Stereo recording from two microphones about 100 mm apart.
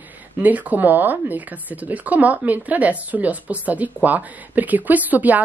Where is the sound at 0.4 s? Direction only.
15° right (ahead or behind).